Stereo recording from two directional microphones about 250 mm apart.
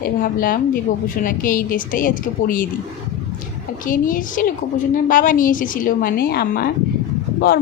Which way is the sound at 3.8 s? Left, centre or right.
Left.